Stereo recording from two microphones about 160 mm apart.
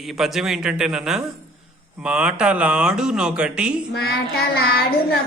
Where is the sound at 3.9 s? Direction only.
80° left.